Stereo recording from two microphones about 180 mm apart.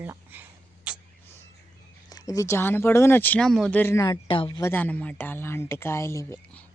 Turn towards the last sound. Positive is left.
turn(degrees=15)  # may be behind; listen again after turning